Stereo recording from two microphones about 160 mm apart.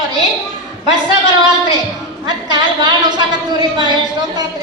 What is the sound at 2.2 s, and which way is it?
A woman's voice, 30° right (ahead or behind).